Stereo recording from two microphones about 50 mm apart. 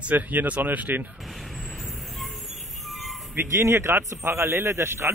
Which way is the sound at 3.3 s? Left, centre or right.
Right.